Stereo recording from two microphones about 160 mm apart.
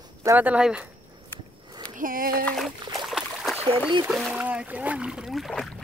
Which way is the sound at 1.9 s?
60° right (ahead or behind).